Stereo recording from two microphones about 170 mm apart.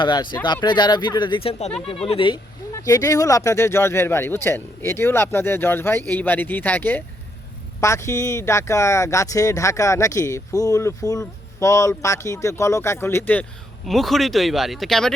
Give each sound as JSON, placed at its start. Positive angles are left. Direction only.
{"t": 0.0, "sound": "speech", "side_deg": 25}
{"t": 2.7, "sound": "speech", "side_deg": 20}
{"t": 13.8, "sound": "speech", "side_deg": 0}